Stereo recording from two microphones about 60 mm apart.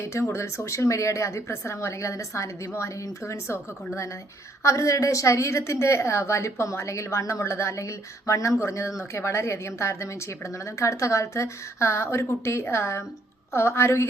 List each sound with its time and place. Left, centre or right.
0.1 s a woman's voice: left
4.6 s a woman's voice: left